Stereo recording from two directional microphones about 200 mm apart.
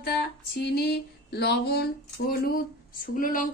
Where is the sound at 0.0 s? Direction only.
55° left (ahead or behind).